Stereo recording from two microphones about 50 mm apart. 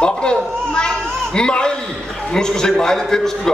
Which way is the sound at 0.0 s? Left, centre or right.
Centre.